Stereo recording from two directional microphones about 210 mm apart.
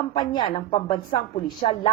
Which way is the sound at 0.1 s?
25° left (ahead or behind).